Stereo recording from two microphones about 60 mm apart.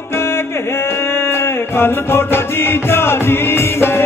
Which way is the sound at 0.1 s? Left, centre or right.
Left.